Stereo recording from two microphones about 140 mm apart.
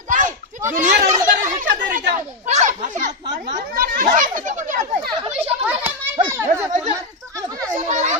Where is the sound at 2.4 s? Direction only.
55° right (ahead or behind).